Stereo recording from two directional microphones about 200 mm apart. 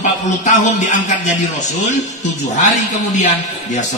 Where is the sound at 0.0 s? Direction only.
35° left (ahead or behind).